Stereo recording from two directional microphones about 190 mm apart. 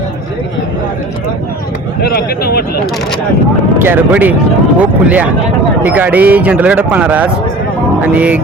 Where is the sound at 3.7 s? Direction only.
10° right (ahead or behind).